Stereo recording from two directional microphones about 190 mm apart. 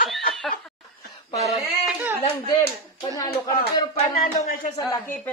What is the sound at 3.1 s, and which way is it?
Speech, 20° left (ahead or behind).